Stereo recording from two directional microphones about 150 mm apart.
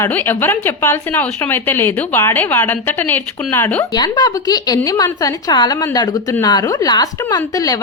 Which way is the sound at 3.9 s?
30° left (ahead or behind).